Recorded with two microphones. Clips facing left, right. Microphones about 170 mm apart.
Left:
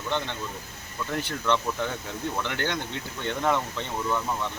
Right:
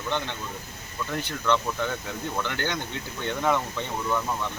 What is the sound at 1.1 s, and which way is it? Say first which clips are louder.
Speech: right 1 dB; centre (ahead or behind).